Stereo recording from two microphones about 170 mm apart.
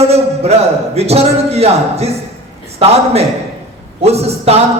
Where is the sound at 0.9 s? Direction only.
35° right (ahead or behind).